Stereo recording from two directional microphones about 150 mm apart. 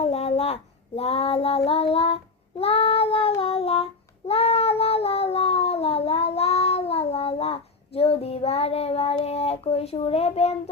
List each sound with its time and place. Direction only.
0.0 s child singing: 45° left (ahead or behind)
4.3 s cat: 40° left (ahead or behind)